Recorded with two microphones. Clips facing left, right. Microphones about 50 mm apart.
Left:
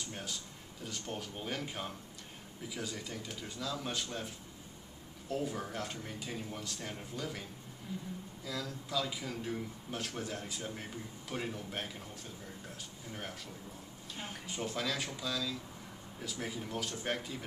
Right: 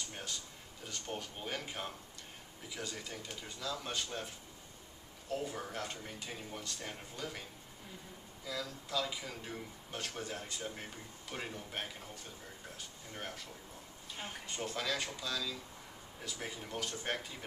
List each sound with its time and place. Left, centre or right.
0.1 s a man's voice: centre
5.3 s a man's voice: centre
8.5 s a man's voice: centre
13.1 s a man's voice: centre